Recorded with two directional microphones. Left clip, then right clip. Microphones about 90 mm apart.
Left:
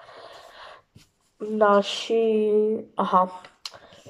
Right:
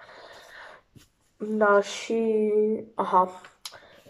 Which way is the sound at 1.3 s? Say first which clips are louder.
Left 2 dB; 10° left (ahead or behind).